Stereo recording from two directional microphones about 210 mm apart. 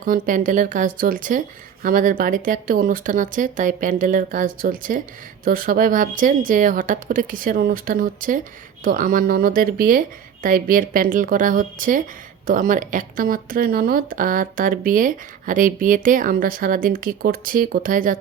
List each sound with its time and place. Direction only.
0.0 s speech: 40° right (ahead or behind)